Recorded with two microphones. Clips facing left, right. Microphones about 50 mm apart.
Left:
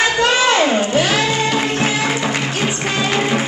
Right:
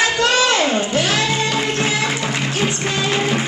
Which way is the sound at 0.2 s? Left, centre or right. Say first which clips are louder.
Left 3 dB; left.